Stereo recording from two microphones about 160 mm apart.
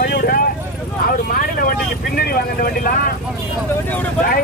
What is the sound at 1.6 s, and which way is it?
Vehicle, 70° left (ahead or behind).